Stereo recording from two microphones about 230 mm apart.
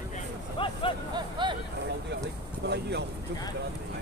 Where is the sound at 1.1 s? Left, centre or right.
Centre.